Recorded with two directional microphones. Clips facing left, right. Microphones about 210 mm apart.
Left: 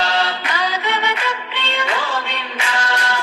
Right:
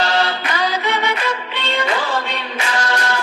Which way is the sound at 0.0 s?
45° right (ahead or behind).